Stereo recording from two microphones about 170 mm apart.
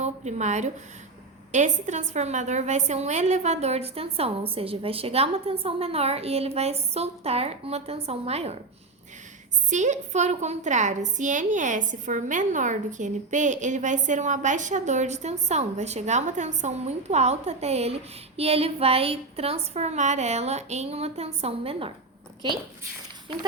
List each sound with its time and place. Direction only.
0.0 s a woman's voice: 40° right (ahead or behind)
9.6 s a woman's voice: 45° right (ahead or behind)